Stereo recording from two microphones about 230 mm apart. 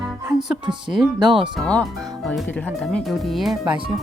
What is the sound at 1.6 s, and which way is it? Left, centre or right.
Speech, centre.